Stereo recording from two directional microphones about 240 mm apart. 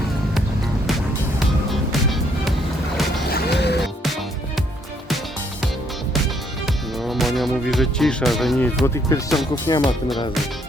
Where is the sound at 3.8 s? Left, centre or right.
Centre.